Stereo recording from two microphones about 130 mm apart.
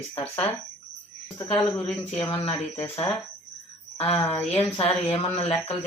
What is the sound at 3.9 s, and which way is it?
A woman's voice, 45° left (ahead or behind).